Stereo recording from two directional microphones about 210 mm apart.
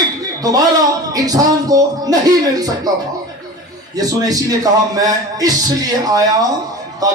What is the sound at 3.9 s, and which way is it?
A man's voice, 15° right (ahead or behind).